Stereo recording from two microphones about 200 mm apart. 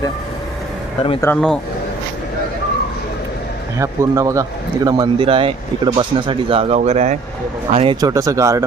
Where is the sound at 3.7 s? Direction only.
15° right (ahead or behind); by 7.9 s 30° right (ahead or behind).